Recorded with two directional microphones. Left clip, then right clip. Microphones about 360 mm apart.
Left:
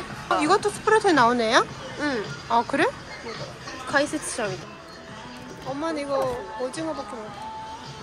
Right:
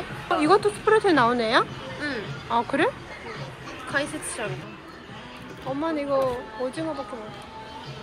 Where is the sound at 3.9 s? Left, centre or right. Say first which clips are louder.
Left 4 dB; left.